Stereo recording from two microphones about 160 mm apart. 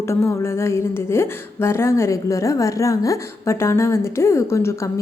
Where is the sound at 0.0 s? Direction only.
15° left (ahead or behind).